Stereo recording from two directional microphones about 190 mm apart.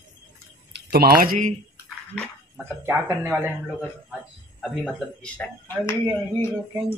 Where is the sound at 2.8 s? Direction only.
15° right (ahead or behind).